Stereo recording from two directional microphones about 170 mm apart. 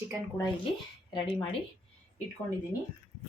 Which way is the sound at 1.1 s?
30° left (ahead or behind).